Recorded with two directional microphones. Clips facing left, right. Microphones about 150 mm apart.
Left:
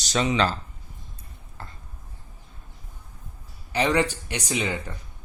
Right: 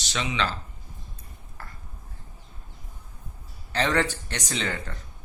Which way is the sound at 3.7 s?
15° left (ahead or behind).